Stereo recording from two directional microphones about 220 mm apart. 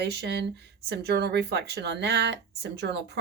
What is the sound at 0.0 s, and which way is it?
Speech, 50° right (ahead or behind).